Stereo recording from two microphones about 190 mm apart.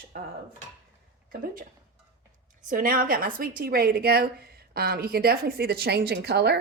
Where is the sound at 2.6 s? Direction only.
50° right (ahead or behind).